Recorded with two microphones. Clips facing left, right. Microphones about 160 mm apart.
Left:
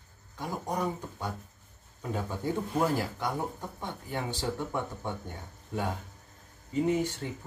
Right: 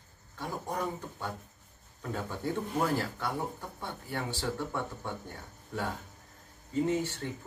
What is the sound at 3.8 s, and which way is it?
Speech, 15° left (ahead or behind).